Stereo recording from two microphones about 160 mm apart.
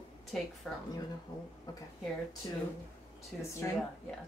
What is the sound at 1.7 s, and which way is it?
Speech, 25° left (ahead or behind).